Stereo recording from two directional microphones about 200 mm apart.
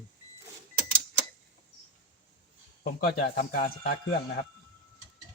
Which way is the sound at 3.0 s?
50° left (ahead or behind).